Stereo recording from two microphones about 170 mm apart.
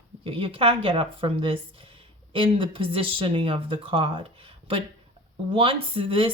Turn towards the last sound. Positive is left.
turn(degrees=-30)  # may be behind; listen again after turning